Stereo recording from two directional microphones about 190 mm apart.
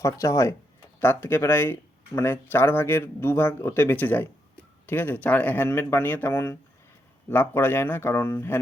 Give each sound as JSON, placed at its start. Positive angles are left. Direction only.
{"t": 0.0, "sound": "speech", "side_deg": 15}